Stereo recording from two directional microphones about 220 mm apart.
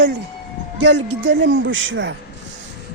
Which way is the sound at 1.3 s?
55° right (ahead or behind).